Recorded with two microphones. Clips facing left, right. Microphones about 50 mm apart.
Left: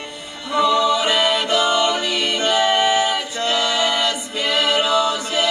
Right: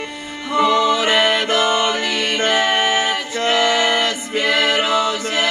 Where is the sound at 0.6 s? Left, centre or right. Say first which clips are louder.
Right 1 dB; right.